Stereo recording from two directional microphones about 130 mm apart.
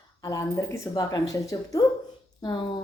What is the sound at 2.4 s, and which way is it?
Speech, 40° left (ahead or behind).